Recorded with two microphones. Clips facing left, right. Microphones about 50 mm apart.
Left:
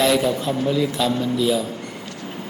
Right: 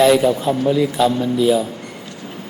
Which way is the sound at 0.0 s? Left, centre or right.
Centre.